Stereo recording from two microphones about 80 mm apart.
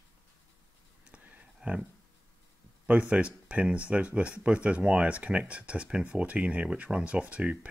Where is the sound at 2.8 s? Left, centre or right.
Centre.